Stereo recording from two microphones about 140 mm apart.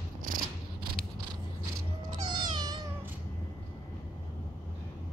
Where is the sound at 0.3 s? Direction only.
85° right.